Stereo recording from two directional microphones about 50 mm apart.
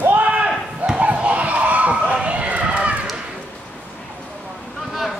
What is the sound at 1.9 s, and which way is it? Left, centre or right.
Run, right.